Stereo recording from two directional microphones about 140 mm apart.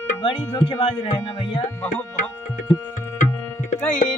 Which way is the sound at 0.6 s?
35° left (ahead or behind).